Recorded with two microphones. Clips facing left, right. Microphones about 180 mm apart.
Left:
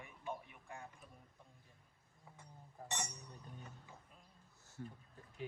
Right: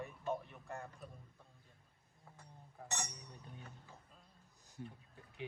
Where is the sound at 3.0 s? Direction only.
5° right (ahead or behind).